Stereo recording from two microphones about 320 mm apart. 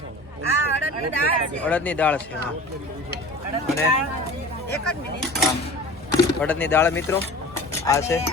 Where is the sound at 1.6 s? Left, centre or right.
Centre.